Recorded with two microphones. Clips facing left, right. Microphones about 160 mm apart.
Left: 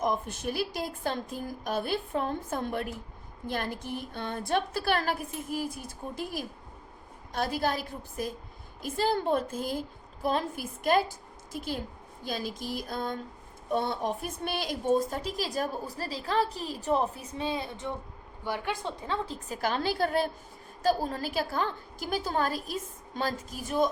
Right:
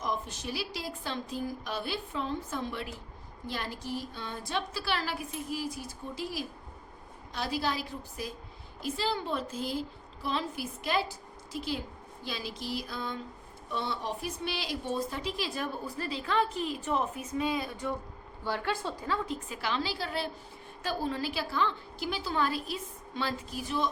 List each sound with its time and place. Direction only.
0.0 s a woman's voice: 55° left (ahead or behind); by 19.5 s 30° left (ahead or behind)
19.6 s a woman's voice: 50° left (ahead or behind)